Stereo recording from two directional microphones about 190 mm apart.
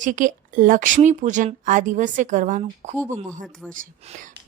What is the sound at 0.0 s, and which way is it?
Speech, 45° right (ahead or behind).